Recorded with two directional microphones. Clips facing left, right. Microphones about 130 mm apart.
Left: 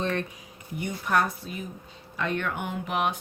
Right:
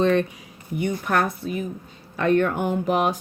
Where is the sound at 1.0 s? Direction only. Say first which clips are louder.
Left 1 dB; 55° right (ahead or behind).